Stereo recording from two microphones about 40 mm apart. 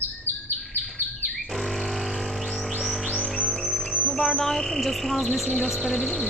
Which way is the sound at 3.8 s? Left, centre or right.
Centre.